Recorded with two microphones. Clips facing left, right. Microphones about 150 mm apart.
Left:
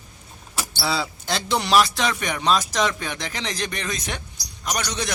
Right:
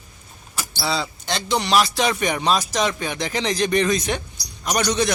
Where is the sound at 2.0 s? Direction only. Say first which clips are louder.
Right 4 dB; 10° right (ahead or behind).